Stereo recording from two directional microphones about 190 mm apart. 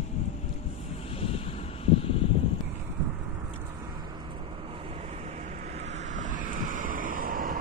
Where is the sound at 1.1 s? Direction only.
30° left (ahead or behind).